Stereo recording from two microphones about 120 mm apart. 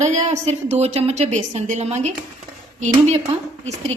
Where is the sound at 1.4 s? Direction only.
90° right; by 2.0 s 70° right (ahead or behind).